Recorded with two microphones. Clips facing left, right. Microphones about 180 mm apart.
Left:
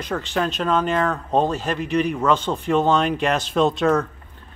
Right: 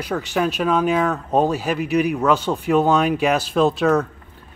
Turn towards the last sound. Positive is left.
turn(degrees=0)  # may be behind; listen again after turning